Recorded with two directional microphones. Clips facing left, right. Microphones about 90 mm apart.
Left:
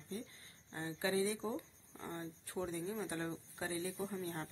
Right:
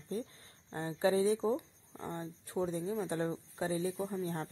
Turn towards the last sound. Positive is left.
turn(degrees=-35)  # may be behind; listen again after turning